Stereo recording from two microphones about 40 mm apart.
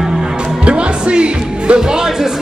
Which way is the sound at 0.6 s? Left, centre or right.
Right.